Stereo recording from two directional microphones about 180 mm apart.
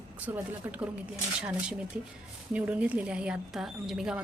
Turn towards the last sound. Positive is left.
turn(degrees=-5)  # may be behind; listen again after turning